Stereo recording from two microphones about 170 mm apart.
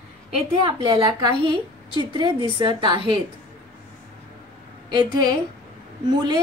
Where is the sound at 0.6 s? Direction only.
25° right (ahead or behind).